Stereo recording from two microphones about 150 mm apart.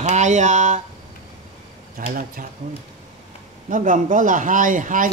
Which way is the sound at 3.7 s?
60° right (ahead or behind).